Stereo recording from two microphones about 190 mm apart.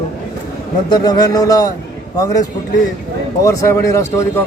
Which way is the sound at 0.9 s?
20° left (ahead or behind).